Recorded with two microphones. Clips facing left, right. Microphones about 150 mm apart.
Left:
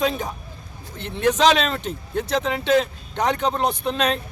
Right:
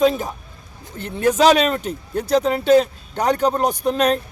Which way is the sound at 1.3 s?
10° right (ahead or behind).